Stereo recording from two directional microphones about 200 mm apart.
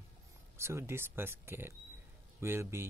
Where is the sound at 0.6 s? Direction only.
15° right (ahead or behind).